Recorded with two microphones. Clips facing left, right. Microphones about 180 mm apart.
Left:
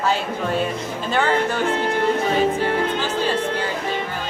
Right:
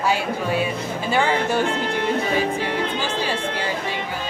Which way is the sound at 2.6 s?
50° left (ahead or behind).